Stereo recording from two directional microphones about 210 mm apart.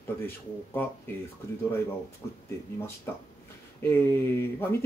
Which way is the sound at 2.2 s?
10° left (ahead or behind).